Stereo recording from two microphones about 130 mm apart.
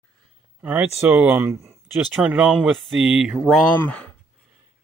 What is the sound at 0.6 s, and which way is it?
Speech, 10° right (ahead or behind).